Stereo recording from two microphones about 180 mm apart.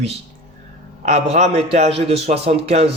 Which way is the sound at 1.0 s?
40° right (ahead or behind).